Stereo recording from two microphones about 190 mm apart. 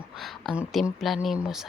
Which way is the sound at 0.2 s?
Centre (ahead or behind).